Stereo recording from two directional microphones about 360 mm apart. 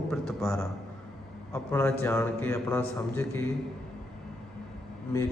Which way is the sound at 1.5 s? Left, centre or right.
Centre.